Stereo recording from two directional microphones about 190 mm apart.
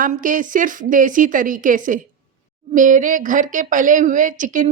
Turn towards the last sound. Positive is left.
turn(degrees=-45)  # may be behind; listen again after turning